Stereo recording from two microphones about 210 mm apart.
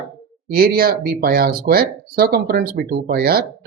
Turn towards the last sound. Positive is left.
turn(degrees=-45)  # may be behind; listen again after turning